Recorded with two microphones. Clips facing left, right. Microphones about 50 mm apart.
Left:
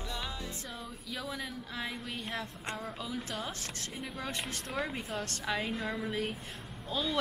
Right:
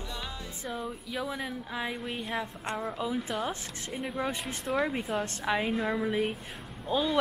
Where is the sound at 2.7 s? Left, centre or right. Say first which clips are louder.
Right 9 dB; centre.